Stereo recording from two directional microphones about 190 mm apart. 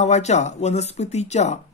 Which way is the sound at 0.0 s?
35° left (ahead or behind).